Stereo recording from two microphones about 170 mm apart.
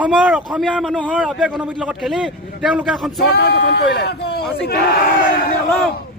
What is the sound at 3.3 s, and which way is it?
Speech, 70° left (ahead or behind).